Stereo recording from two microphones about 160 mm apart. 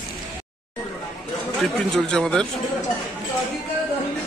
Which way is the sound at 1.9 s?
5° left (ahead or behind).